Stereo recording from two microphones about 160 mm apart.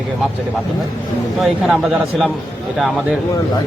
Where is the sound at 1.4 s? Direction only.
5° right (ahead or behind).